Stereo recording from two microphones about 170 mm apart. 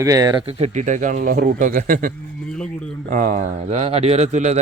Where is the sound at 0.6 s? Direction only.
45° right (ahead or behind).